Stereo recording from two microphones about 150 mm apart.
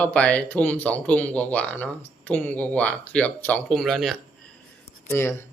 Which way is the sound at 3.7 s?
Centre (ahead or behind).